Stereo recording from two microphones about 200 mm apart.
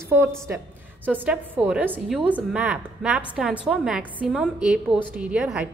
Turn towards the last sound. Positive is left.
turn(degrees=-5)  # may be behind; listen again after turning